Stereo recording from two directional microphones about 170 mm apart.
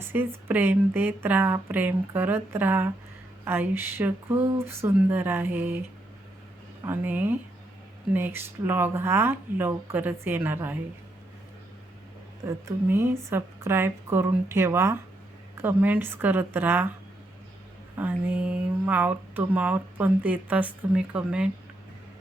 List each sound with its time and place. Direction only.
0.0 s speech: 15° right (ahead or behind)
6.8 s speech: 10° right (ahead or behind)
12.5 s speech: 15° right (ahead or behind)
17.9 s speech: 10° right (ahead or behind)